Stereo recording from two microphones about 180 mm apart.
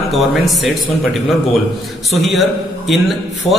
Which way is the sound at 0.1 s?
Centre (ahead or behind).